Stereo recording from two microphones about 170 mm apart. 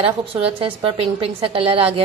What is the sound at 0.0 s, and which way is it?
A woman's voice, 30° right (ahead or behind).